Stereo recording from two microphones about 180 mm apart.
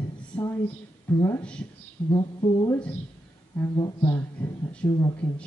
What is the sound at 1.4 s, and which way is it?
Speech, 5° left (ahead or behind).